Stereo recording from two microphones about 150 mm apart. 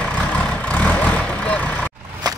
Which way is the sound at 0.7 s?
10° left (ahead or behind).